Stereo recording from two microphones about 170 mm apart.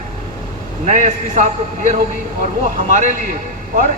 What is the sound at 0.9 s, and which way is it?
A man's voice, 45° right (ahead or behind).